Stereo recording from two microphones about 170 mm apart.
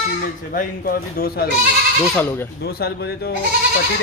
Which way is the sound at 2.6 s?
70° left (ahead or behind).